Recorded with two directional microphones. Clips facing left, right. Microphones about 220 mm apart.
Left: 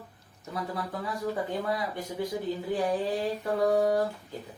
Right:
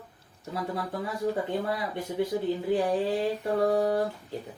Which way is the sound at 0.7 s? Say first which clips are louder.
Right 2 dB; 25° right (ahead or behind).